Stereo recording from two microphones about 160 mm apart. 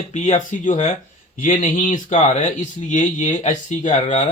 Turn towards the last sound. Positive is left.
turn(degrees=50)  # may be behind; listen again after turning